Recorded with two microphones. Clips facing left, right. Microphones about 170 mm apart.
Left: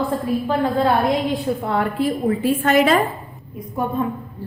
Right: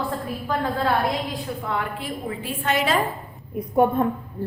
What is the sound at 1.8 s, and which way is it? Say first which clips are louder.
A woman's voice: left 9 dB; 45° left (ahead or behind).